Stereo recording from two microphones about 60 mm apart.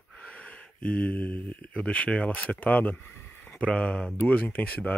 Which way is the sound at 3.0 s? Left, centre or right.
Left.